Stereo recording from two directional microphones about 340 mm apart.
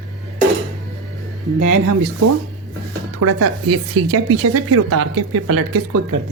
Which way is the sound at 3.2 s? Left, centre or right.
Right.